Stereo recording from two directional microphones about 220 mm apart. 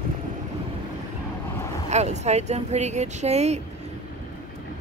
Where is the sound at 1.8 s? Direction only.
30° right (ahead or behind).